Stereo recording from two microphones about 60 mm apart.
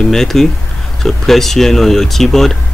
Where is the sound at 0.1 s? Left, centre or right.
Centre.